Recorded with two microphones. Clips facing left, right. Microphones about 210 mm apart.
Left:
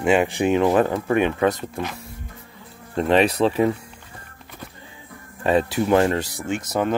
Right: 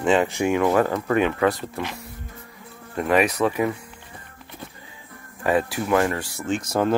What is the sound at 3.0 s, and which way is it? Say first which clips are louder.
Speech: left 2 dB; 25° left (ahead or behind).